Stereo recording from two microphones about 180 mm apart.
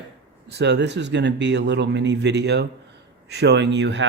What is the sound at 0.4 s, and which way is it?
Speech, 70° right (ahead or behind).